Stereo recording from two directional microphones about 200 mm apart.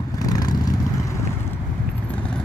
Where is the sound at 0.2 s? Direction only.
20° left (ahead or behind).